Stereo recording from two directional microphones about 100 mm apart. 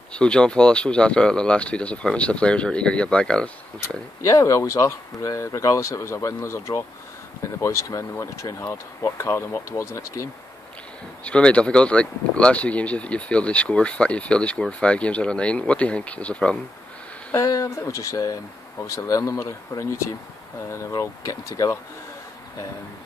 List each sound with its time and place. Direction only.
0.1 s speech: 10° left (ahead or behind)
4.3 s speech: 30° left (ahead or behind)
11.2 s speech: 10° left (ahead or behind)
17.3 s speech: 30° left (ahead or behind)
21.0 s speech: 35° left (ahead or behind)